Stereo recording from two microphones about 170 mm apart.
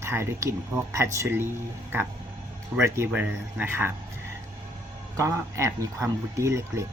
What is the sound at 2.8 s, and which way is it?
Speech, 10° right (ahead or behind).